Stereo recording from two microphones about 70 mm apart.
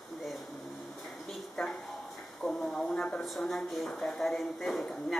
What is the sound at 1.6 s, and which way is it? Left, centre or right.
Speech, centre.